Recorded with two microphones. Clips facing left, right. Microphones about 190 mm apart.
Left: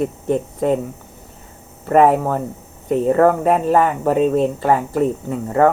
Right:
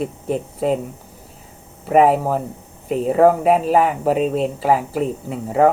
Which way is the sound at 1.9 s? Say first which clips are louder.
Left 1 dB; 5° right (ahead or behind).